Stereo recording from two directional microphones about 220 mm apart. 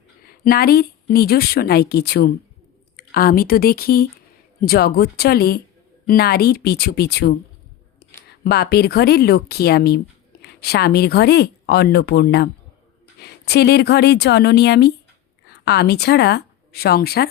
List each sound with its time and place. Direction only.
0.3 s a woman's voice: 40° left (ahead or behind)